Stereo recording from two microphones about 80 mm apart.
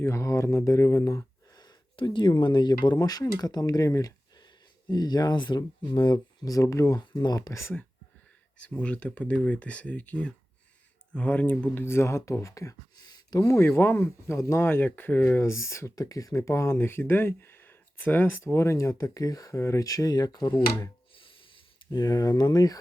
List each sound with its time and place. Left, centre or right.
0.0 s speech: left
4.4 s speech: left
6.4 s speech: left
7.0 s speech: left
7.3 s speech: left
8.5 s speech: centre
11.8 s speech: left
13.5 s speech: left
15.4 s speech: left
16.0 s speech: left
16.4 s speech: left
21.1 s a sound: left